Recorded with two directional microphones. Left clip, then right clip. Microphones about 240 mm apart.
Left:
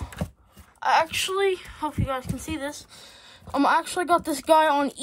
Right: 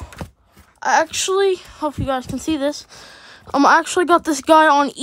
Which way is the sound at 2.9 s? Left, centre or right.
Right.